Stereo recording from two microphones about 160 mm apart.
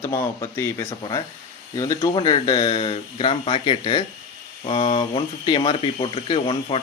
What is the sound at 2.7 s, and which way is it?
Speech, 40° left (ahead or behind).